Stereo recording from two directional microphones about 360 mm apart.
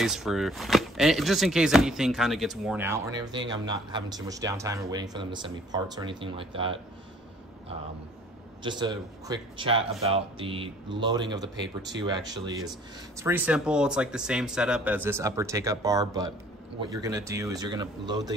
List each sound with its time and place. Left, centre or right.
0.0 s speech: centre
8.6 s speech: centre
11.5 s speech: right
12.0 s speech: centre